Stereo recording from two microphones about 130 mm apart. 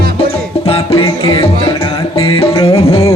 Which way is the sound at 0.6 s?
45° left (ahead or behind).